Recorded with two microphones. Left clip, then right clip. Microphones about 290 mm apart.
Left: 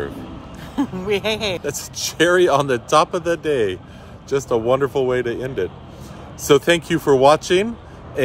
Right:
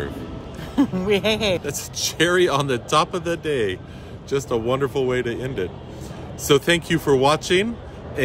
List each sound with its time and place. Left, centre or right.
0.7 s speech: centre
1.6 s speech: centre